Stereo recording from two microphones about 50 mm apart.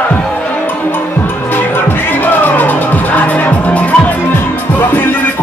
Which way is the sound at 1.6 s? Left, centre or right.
Left.